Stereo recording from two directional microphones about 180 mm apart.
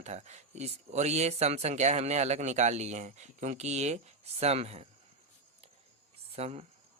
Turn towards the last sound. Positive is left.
turn(degrees=-35)  # may be behind; listen again after turning